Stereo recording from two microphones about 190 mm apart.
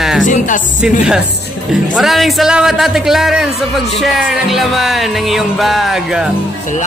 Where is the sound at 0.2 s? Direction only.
40° left (ahead or behind).